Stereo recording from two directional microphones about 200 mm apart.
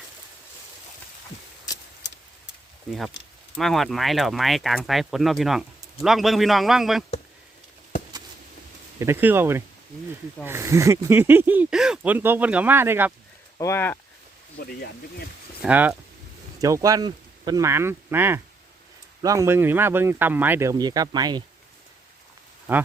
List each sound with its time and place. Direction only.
2.9 s speech: 5° right (ahead or behind)
9.0 s speech: 10° right (ahead or behind)
13.6 s speech: 15° left (ahead or behind)
14.6 s speech: 50° left (ahead or behind)
15.6 s speech: 10° right (ahead or behind)
22.7 s speech: 10° right (ahead or behind)